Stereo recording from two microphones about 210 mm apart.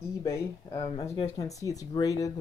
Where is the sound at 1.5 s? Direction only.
15° left (ahead or behind).